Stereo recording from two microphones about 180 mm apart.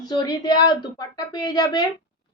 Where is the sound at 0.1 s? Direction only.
20° left (ahead or behind).